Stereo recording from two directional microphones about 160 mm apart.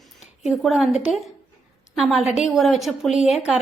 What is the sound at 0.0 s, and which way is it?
A woman's voice, centre (ahead or behind).